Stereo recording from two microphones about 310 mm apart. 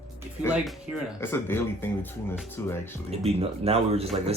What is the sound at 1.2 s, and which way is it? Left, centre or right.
Speech, centre.